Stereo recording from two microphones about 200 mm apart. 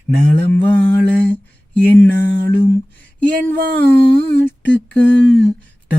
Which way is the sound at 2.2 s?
55° right (ahead or behind).